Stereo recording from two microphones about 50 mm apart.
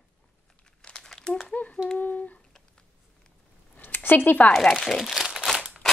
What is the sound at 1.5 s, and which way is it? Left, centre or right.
Humming, left.